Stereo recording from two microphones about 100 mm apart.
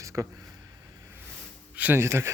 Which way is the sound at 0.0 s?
30° right (ahead or behind).